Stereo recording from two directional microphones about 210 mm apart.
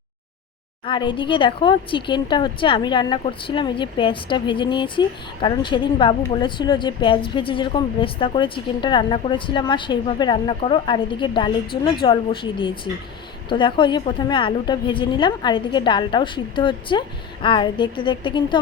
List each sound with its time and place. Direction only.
0.9 s speech: 20° left (ahead or behind)